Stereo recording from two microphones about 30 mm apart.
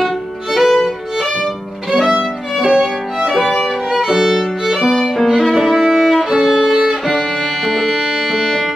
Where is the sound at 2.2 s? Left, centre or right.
Centre.